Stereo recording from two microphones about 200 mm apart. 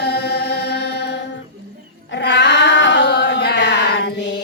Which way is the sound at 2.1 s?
60° left (ahead or behind).